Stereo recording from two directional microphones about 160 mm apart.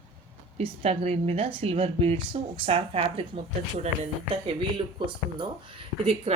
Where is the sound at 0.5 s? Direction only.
35° right (ahead or behind).